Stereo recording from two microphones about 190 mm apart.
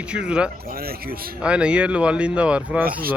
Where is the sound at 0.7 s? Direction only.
50° right (ahead or behind).